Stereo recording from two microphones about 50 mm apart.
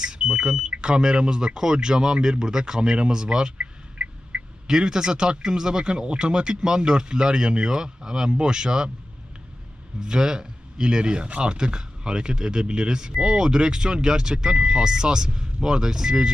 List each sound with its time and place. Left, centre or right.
0.0 s smoke detector: centre
0.7 s speech: centre
4.6 s speech: centre
10.0 s speech: centre